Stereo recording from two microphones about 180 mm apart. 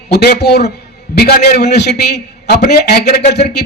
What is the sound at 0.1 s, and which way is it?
A man's voice, 65° left (ahead or behind).